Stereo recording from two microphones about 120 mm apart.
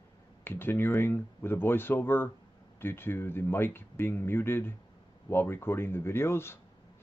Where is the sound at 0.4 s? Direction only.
20° left (ahead or behind).